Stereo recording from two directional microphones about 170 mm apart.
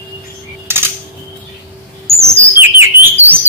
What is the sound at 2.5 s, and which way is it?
Chirp, 15° right (ahead or behind).